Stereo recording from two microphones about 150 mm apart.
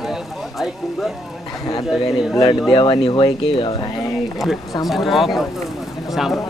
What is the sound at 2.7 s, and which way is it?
Speech, 35° left (ahead or behind).